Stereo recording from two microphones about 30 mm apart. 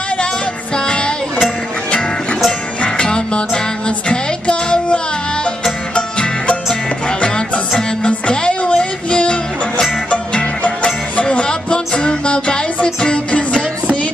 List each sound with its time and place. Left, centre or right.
0.8 s music: left
3.0 s music: left
6.7 s music: left
10.6 s music: left
11.2 s music: left